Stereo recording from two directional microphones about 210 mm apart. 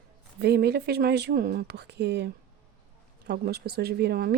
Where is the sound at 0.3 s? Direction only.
50° right (ahead or behind).